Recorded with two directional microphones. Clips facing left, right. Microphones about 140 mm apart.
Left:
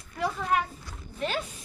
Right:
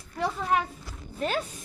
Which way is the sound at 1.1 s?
40° right (ahead or behind).